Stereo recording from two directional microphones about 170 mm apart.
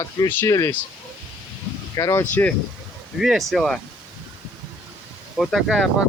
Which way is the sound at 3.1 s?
Centre (ahead or behind).